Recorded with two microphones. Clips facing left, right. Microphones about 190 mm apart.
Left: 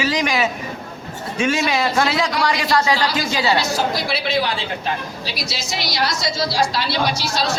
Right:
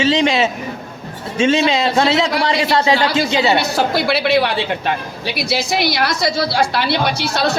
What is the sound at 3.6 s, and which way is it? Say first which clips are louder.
A woman's voice: right 4 dB; 60° right (ahead or behind).